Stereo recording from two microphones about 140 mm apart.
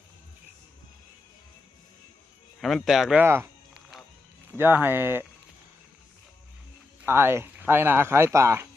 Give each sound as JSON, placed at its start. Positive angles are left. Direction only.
{"t": 2.6, "sound": "speech", "side_deg": 0}
{"t": 3.2, "sound": "speech", "side_deg": -15}
{"t": 4.5, "sound": "speech", "side_deg": -15}
{"t": 7.0, "sound": "speech", "side_deg": -15}